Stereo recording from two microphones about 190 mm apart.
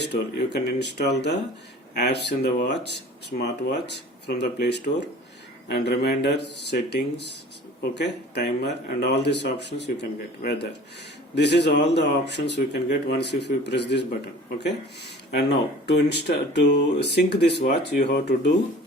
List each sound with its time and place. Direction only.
0.0 s speech: 60° left (ahead or behind)
15.3 s speech: 60° left (ahead or behind)